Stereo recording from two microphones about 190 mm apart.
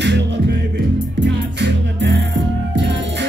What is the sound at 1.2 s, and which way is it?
Music, 65° right (ahead or behind).